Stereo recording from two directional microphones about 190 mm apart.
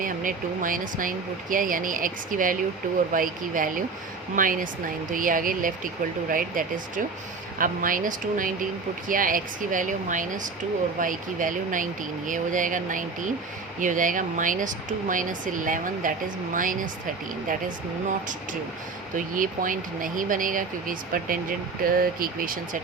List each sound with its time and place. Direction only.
0.0 s speech: 45° right (ahead or behind)
19.1 s speech: 45° right (ahead or behind)